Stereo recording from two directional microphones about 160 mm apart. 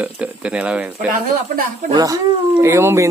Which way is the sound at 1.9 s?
20° right (ahead or behind).